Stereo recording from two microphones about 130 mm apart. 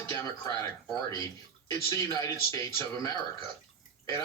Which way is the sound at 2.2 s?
20° left (ahead or behind).